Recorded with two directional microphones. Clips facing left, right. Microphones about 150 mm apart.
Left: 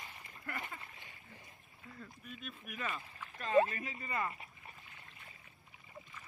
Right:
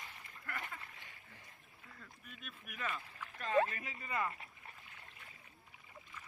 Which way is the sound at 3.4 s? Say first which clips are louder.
Left 3 dB; 15° left (ahead or behind).